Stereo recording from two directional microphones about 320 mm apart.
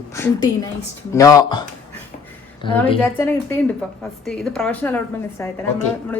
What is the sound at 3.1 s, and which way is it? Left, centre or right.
A woman's voice, centre.